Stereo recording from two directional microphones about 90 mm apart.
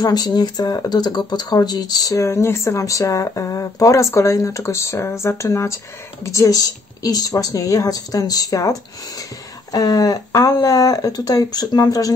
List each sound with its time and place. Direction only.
0.0 s speech: 50° left (ahead or behind)
2.2 s speech: 30° left (ahead or behind)